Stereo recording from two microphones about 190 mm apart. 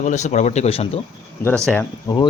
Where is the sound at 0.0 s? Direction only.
40° left (ahead or behind).